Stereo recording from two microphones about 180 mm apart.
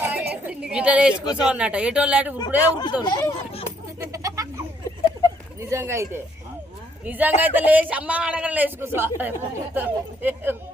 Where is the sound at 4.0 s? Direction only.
15° right (ahead or behind).